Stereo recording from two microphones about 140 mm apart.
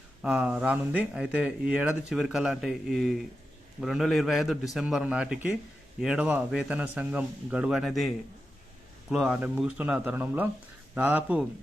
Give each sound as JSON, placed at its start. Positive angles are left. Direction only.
{"t": 0.2, "sound": "a man's voice", "side_deg": -5}